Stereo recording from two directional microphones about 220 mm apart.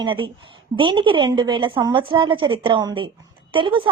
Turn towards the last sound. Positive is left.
turn(degrees=-25)  # may be behind; listen again after turning